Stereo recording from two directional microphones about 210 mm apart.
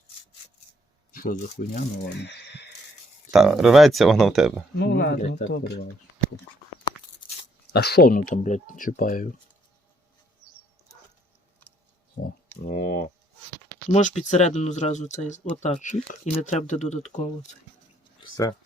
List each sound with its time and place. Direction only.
1.1 s speech: 40° left (ahead or behind)
3.3 s speech: centre (ahead or behind)
4.8 s speech: 55° left (ahead or behind)
7.7 s speech: 50° left (ahead or behind)
8.3 s speech: 35° left (ahead or behind)
12.2 s a sound: 40° left (ahead or behind)
13.9 s speech: 35° left (ahead or behind)
18.2 s a sound: 20° left (ahead or behind)